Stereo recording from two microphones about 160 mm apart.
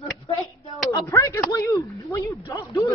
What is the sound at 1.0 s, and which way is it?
Speech, 15° left (ahead or behind).